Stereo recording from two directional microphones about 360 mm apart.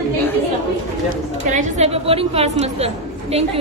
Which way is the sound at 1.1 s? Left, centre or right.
Right.